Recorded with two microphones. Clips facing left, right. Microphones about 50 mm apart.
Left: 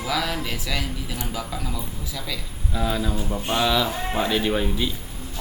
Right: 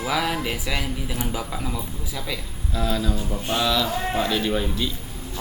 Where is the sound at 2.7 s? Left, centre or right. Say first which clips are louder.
Even; centre.